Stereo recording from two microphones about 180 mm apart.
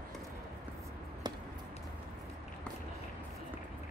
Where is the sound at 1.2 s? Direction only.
25° right (ahead or behind).